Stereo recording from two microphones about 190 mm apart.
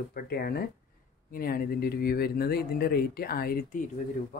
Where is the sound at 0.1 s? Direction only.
50° left (ahead or behind).